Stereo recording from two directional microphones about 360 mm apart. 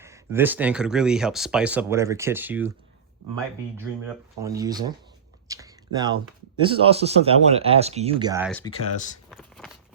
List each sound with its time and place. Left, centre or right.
0.0 s speech: centre
4.4 s speech: centre
5.5 s a sound: centre
6.6 s speech: centre
8.4 s speech: centre
9.3 s a sound: centre